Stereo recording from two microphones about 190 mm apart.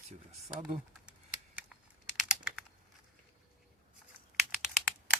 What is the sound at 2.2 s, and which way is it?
Typing, 5° right (ahead or behind).